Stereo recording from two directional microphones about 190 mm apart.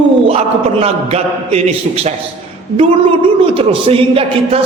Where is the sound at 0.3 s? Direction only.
30° right (ahead or behind).